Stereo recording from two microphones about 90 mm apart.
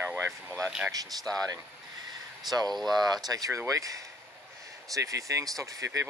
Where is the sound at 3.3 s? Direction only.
40° right (ahead or behind).